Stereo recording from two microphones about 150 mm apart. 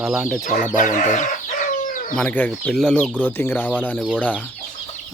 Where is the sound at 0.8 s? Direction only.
60° left (ahead or behind).